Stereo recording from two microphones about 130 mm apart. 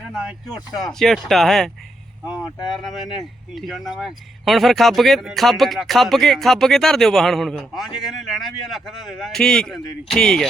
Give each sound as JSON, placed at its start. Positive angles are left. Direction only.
{"t": 0.1, "sound": "speech", "side_deg": -5}
{"t": 2.7, "sound": "speech", "side_deg": 0}